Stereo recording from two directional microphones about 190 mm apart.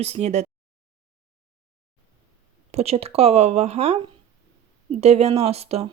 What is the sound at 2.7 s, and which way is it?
Speech, 30° right (ahead or behind).